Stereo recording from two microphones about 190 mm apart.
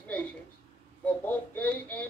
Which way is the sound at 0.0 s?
5° left (ahead or behind).